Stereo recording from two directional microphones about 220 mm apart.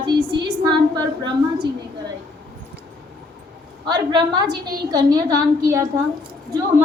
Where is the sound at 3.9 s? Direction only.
20° right (ahead or behind).